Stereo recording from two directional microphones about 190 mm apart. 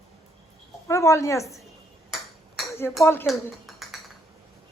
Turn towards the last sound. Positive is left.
turn(degrees=0)  # may be behind; listen again after turning